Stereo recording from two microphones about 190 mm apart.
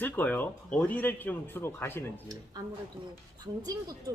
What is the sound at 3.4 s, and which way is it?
Speech, 20° right (ahead or behind).